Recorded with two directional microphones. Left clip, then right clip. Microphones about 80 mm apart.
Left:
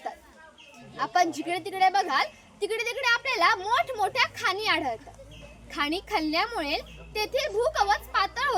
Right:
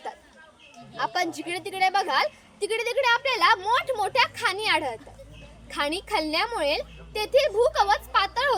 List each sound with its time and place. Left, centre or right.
0.9 s a woman's voice: left